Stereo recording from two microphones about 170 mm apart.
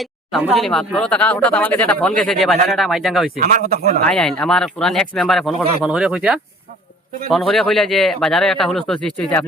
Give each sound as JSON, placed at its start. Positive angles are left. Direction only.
{"t": 0.0, "sound": "a sound", "side_deg": 0}
{"t": 0.5, "sound": "speech", "side_deg": 0}
{"t": 3.3, "sound": "speech", "side_deg": -65}
{"t": 4.0, "sound": "speech", "side_deg": 5}